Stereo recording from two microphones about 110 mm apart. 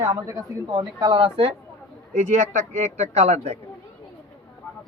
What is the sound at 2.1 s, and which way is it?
Speech, 90° right.